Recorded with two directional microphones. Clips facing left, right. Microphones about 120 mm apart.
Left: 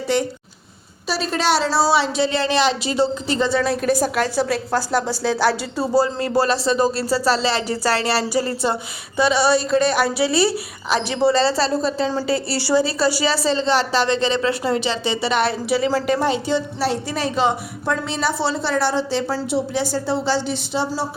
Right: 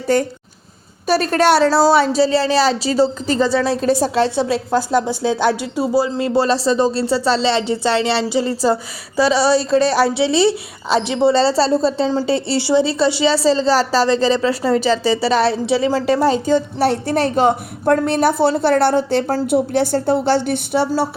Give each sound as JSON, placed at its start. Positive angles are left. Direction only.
{"t": 0.1, "sound": "a woman's voice", "side_deg": -45}